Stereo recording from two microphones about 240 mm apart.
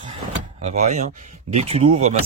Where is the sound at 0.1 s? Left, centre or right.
Right.